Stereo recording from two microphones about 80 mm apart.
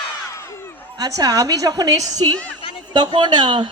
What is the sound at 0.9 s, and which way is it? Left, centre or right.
A woman's voice, right.